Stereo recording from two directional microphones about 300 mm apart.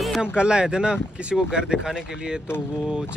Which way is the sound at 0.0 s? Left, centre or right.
Centre.